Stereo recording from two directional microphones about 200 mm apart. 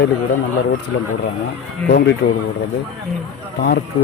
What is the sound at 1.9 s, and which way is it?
Speech, 50° left (ahead or behind).